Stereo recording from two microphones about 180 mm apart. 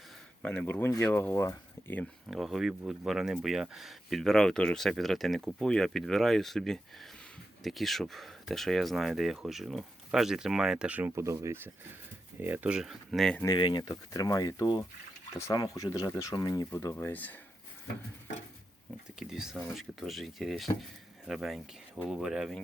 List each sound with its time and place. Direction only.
0.4 s speech: 5° left (ahead or behind)
2.3 s speech: centre (ahead or behind)
13.4 s speech: 25° left (ahead or behind); by 17.3 s 10° left (ahead or behind)
19.2 s speech: 5° right (ahead or behind)